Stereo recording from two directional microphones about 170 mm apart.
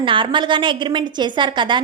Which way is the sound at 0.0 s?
30° right (ahead or behind).